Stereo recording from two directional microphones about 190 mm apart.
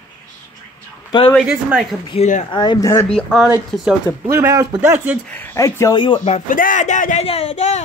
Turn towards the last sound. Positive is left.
turn(degrees=35)  # may be behind; listen again after turning